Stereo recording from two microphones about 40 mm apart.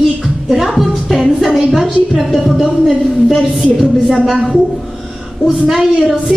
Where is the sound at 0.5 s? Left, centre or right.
Centre.